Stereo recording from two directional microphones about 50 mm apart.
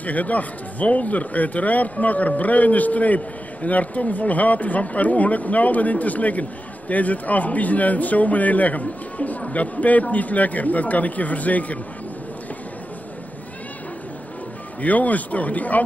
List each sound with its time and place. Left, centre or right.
0.0 s speech: left
14.8 s speech: left